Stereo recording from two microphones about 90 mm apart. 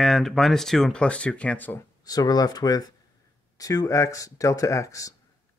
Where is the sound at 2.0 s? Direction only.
45° left (ahead or behind).